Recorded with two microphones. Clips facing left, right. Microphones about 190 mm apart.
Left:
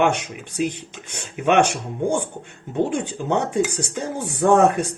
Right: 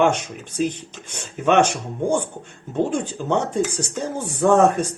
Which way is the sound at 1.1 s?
15° left (ahead or behind).